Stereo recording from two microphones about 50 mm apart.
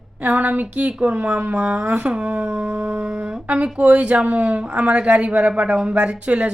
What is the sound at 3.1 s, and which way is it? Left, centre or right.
A woman's voice, right.